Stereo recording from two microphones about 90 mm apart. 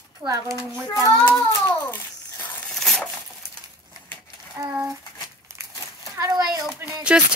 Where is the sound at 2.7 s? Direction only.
5° left (ahead or behind).